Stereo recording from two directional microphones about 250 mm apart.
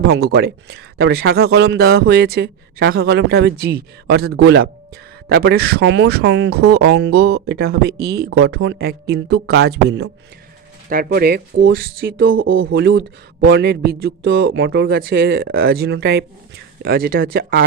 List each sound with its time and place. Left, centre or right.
0.1 s speech: right
12.3 s speech: right